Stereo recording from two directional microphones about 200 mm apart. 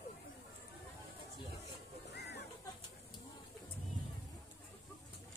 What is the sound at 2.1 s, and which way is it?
Music, 55° left (ahead or behind).